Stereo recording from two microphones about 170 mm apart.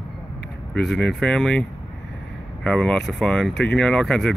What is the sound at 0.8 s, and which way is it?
Speech, centre (ahead or behind).